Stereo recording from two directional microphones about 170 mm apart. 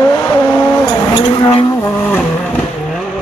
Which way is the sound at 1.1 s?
30° left (ahead or behind).